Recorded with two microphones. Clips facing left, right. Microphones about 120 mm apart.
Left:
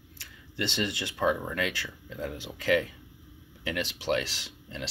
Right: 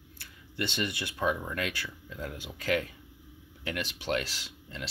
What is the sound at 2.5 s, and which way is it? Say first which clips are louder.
Speech: left 4 dB; 40° right (ahead or behind).